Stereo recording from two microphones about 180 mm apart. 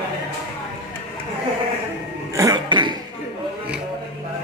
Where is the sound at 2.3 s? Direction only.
20° right (ahead or behind).